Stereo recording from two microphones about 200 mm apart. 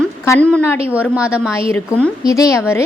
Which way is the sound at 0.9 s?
5° right (ahead or behind).